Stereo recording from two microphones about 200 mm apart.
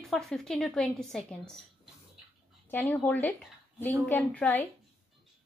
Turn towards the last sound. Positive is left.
turn(degrees=10)  # may be behind; listen again after turning